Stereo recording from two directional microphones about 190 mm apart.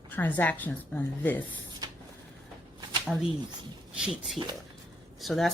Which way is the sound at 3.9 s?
5° right (ahead or behind).